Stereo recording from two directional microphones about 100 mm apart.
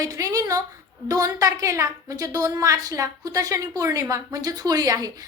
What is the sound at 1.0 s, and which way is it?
A woman's voice, 40° right (ahead or behind).